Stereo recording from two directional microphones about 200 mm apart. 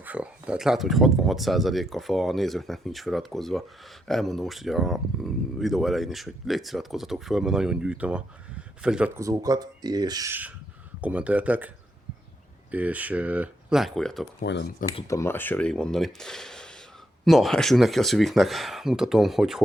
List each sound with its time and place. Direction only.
0.0 s speech: 5° right (ahead or behind)
12.7 s speech: 5° right (ahead or behind)
14.4 s speech: 60° left (ahead or behind)
15.0 s speech: 15° left (ahead or behind); by 19.6 s 5° right (ahead or behind)